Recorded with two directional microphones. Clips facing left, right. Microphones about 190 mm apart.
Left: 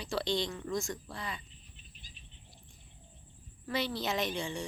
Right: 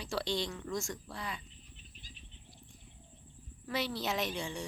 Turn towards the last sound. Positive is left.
turn(degrees=-5)  # may be behind; listen again after turning